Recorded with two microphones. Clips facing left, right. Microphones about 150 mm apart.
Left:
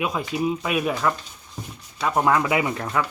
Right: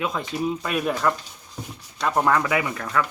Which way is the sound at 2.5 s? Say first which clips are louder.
Left 1 dB; 25° left (ahead or behind).